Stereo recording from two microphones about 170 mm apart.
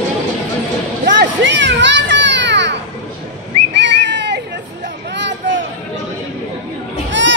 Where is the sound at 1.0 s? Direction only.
80° right.